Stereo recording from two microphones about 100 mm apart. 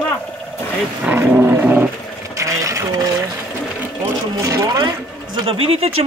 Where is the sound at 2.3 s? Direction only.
35° right (ahead or behind).